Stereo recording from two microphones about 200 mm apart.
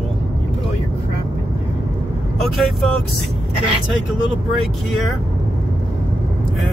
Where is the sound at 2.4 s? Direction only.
Centre (ahead or behind).